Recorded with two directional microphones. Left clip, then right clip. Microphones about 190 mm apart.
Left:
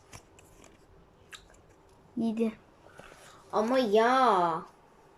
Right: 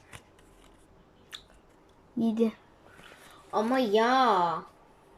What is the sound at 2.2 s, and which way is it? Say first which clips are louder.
Speech: right 3 dB; 10° right (ahead or behind).